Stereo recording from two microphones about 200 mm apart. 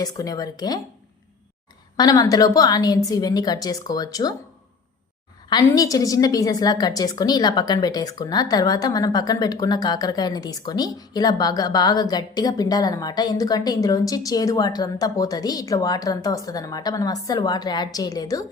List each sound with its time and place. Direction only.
0.0 s a woman's voice: 20° left (ahead or behind)
2.0 s a woman's voice: 20° left (ahead or behind)
5.5 s a woman's voice: 20° left (ahead or behind)